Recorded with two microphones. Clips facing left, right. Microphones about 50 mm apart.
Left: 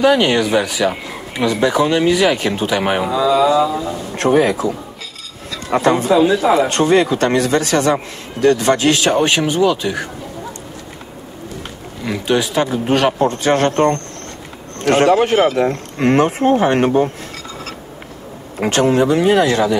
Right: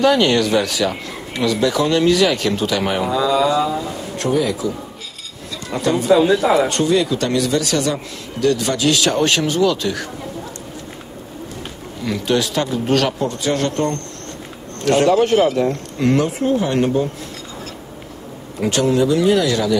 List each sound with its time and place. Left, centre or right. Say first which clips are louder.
0.0 s speech: left 1 dB; centre
3.1 s mantra: left 3 dB; centre
4.2 s a man's voice: left 5 dB; left
6.1 s mantra: right 1 dB; centre
6.7 s a man's voice: left 3 dB; left; by 10.0 s centre
12.0 s speech: left 1 dB; centre
13.2 s a man's voice: left 5 dB; left
18.6 s a man's voice: left 2 dB; left